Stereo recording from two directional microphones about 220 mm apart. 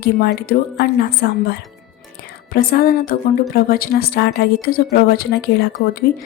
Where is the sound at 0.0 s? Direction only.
45° left (ahead or behind).